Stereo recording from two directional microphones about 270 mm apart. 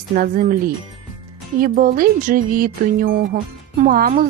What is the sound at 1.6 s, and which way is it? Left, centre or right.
A woman's voice, right.